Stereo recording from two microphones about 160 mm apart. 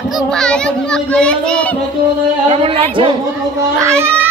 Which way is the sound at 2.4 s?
35° right (ahead or behind).